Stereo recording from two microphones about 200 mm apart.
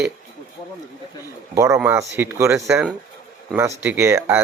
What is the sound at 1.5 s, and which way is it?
A man's voice, 15° right (ahead or behind).